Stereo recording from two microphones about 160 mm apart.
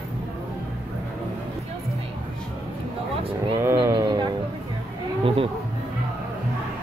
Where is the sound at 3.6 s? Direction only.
15° right (ahead or behind).